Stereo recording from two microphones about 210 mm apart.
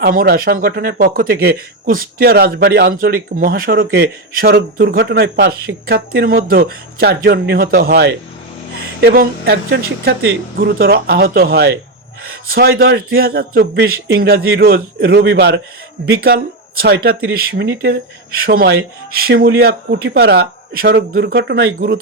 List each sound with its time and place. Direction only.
0.0 s speech: 45° right (ahead or behind)